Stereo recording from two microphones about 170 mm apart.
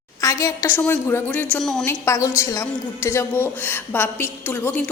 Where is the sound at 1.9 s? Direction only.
15° left (ahead or behind).